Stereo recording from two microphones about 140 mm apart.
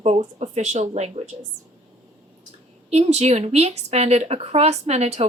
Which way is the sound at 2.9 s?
50° right (ahead or behind).